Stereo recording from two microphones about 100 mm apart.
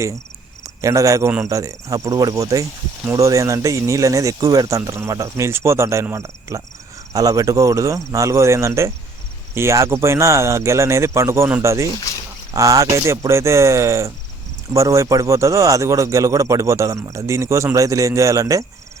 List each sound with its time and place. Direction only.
0.6 s speech: 30° right (ahead or behind)